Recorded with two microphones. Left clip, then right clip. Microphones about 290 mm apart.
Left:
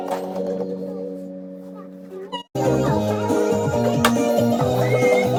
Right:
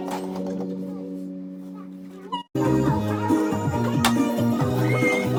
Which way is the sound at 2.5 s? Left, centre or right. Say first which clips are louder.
Left 3 dB; centre.